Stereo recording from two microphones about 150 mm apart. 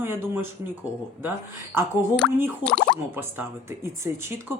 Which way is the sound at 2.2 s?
10° left (ahead or behind).